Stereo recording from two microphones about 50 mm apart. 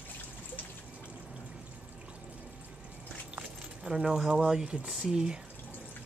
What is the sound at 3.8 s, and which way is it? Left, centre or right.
Speech, centre.